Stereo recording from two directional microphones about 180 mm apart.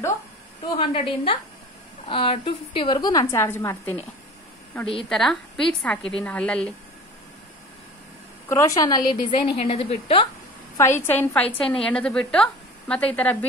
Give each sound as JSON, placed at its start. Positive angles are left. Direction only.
{"t": 0.7, "sound": "a woman's voice", "side_deg": 30}
{"t": 5.1, "sound": "a woman's voice", "side_deg": 0}
{"t": 8.5, "sound": "a woman's voice", "side_deg": 15}
{"t": 10.8, "sound": "a woman's voice", "side_deg": 15}